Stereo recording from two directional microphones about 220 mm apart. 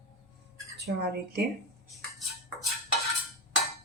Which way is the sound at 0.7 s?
50° right (ahead or behind).